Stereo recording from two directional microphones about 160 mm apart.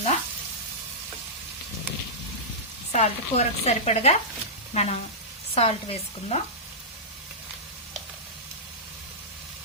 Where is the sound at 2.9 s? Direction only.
45° left (ahead or behind).